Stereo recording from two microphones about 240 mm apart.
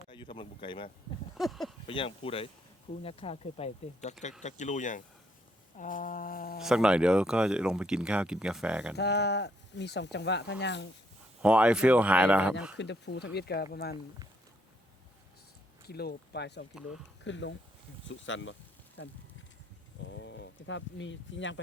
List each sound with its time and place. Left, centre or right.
0.1 s speech: centre
1.4 s a sound: centre
1.9 s speech: left
5.7 s a sound: left
6.6 s speech: centre
9.0 s speech: left
11.4 s speech: centre
12.7 s speech: left
15.9 s speech: left
20.1 s speech: left